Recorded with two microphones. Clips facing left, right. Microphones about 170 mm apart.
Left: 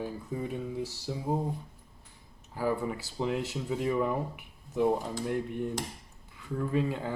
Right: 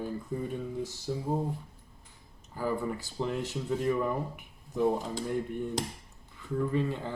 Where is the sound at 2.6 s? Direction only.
5° left (ahead or behind).